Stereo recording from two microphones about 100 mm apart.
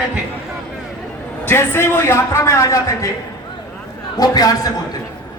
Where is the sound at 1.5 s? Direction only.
25° left (ahead or behind).